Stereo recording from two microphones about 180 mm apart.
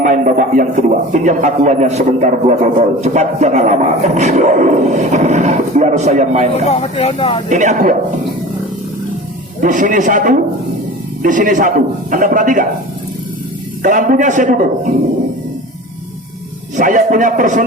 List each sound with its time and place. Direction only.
0.0 s a man's voice: 45° right (ahead or behind)
3.0 s a sound: 40° right (ahead or behind)
6.7 s speech: 35° left (ahead or behind)
7.5 s a man's voice: 45° right (ahead or behind)
9.6 s a man's voice: 45° right (ahead or behind)
13.8 s a man's voice: 45° right (ahead or behind)
16.7 s a man's voice: 45° right (ahead or behind)